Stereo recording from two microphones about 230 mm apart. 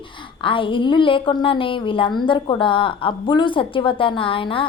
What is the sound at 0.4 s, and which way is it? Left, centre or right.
A woman's voice, left.